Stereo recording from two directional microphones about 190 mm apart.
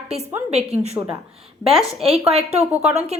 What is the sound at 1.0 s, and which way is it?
Speech, 15° right (ahead or behind).